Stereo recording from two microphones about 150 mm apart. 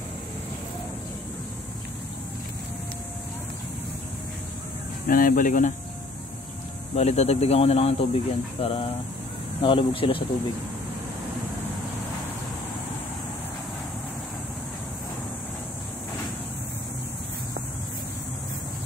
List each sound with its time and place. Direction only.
5.0 s speech: 65° left (ahead or behind)
7.0 s speech: 45° left (ahead or behind)